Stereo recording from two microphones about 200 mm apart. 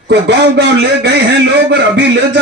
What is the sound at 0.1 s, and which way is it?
A man's voice, 60° right (ahead or behind).